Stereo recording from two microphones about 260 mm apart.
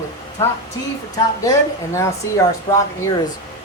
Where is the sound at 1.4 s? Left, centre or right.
Centre.